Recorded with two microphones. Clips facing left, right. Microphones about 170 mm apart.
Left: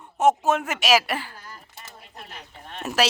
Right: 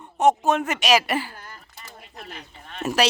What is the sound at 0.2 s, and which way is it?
Speech, 5° left (ahead or behind).